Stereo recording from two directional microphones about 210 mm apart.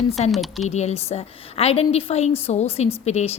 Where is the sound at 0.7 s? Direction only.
30° left (ahead or behind).